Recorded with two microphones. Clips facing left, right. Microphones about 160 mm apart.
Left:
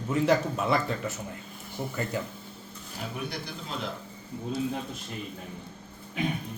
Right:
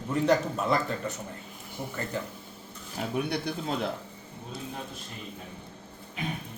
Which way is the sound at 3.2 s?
60° right (ahead or behind).